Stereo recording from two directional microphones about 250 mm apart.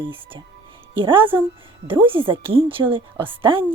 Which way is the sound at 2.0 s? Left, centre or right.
Right.